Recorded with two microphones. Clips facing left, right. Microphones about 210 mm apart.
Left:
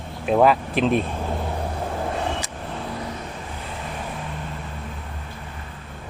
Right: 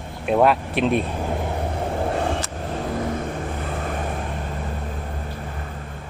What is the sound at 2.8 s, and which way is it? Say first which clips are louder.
Vehicle: right 7 dB; 50° right (ahead or behind).